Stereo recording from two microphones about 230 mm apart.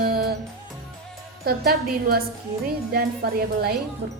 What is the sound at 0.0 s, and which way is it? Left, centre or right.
Music, right.